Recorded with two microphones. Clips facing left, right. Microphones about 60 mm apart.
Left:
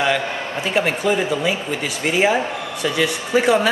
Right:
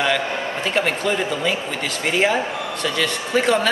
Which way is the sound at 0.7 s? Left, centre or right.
Centre.